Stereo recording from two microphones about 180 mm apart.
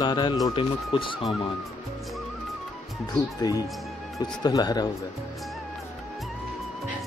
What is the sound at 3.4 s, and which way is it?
Speech, 20° left (ahead or behind).